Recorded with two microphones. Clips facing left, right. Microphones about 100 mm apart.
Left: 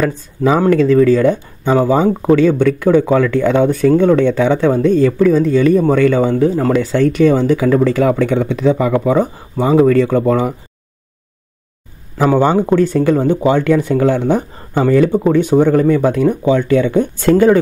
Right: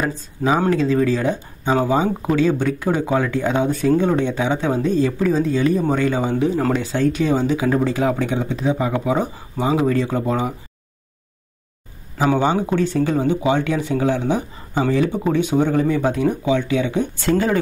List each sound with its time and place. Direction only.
0.0 s speech: 65° left (ahead or behind)
1.8 s speech: 45° left (ahead or behind)
2.3 s speech: 55° left (ahead or behind)
6.3 s speech: 40° left (ahead or behind)
9.8 s speech: 65° left (ahead or behind)
12.2 s speech: 50° left (ahead or behind)